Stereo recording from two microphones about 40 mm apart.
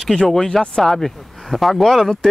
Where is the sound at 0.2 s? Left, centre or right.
Centre.